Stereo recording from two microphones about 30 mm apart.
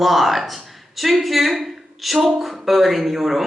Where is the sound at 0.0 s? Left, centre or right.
Centre.